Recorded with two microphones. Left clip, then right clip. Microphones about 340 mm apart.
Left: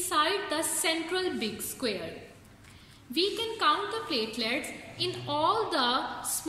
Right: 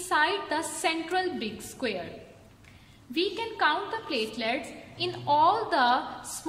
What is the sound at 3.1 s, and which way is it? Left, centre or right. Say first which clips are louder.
A woman's voice: even; right.